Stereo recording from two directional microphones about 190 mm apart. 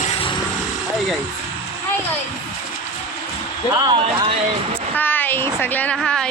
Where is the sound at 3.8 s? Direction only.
25° right (ahead or behind).